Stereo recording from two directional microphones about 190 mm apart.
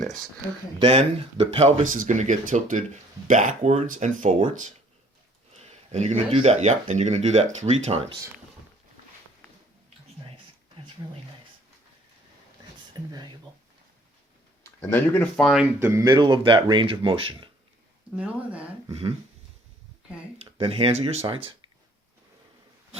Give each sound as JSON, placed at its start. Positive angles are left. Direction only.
{"t": 0.8, "sound": "speech", "side_deg": -30}
{"t": 5.9, "sound": "speech", "side_deg": -35}
{"t": 12.9, "sound": "speech", "side_deg": -20}
{"t": 14.6, "sound": "speech", "side_deg": 10}
{"t": 15.8, "sound": "speech", "side_deg": -15}
{"t": 18.1, "sound": "speech", "side_deg": -10}
{"t": 20.4, "sound": "speech", "side_deg": -30}